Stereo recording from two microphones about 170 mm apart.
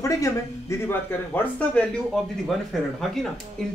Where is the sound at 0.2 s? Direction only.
15° left (ahead or behind).